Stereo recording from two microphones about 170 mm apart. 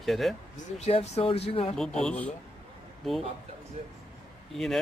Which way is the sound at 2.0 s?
5° left (ahead or behind).